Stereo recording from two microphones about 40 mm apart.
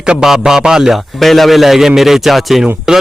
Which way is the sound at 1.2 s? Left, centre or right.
Centre.